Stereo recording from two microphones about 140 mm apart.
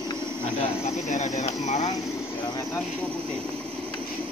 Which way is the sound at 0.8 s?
60° left (ahead or behind).